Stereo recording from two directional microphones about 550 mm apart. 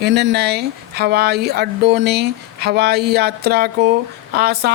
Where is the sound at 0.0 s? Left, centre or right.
Centre.